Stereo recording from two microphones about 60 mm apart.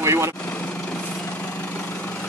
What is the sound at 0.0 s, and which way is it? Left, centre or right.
Vehicle, right.